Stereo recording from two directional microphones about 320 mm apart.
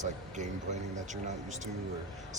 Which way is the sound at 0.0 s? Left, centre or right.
Right.